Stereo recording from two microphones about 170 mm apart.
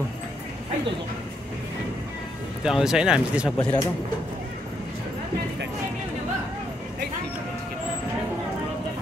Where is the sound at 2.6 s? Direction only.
5° right (ahead or behind).